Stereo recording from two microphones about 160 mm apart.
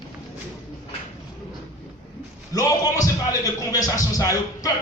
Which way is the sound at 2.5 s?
20° left (ahead or behind).